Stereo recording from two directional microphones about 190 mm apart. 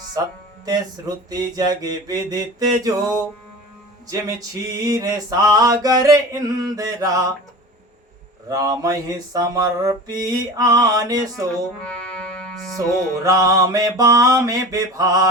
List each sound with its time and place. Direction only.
0.6 s male singing: 20° right (ahead or behind)
8.4 s male singing: 20° right (ahead or behind)
11.9 s music: 5° left (ahead or behind)
13.2 s mantra: 20° right (ahead or behind)